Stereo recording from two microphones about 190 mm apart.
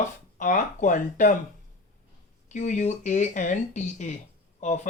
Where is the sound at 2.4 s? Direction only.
40° left (ahead or behind).